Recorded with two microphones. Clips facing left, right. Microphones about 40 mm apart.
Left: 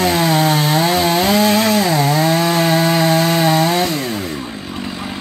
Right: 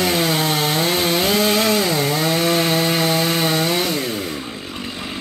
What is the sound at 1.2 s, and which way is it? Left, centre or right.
Chainsaw, centre.